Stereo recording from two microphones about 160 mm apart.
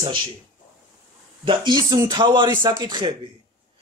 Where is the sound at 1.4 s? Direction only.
25° right (ahead or behind).